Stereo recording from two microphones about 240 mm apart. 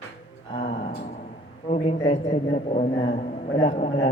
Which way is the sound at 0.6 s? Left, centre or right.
Left.